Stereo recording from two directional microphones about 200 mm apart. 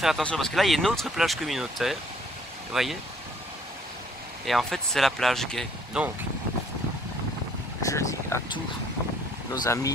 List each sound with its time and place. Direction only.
0.0 s speech: centre (ahead or behind)
4.5 s speech: centre (ahead or behind)
7.8 s speech: 15° left (ahead or behind)
9.5 s speech: 15° left (ahead or behind)